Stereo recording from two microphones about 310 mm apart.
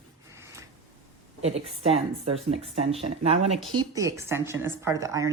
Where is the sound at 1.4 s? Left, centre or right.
Centre.